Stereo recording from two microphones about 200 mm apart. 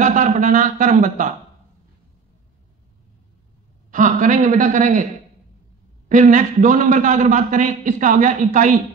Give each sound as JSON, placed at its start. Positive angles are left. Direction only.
{"t": 0.0, "sound": "a man's voice", "side_deg": -40}
{"t": 3.9, "sound": "a man's voice", "side_deg": -40}
{"t": 6.0, "sound": "a man's voice", "side_deg": -40}